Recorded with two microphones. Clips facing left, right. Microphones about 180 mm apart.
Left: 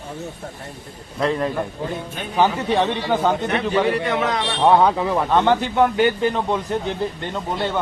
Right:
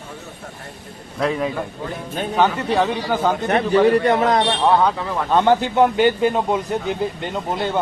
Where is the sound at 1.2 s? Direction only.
5° right (ahead or behind).